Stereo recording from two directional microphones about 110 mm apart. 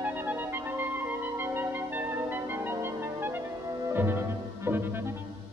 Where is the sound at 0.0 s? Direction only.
15° right (ahead or behind).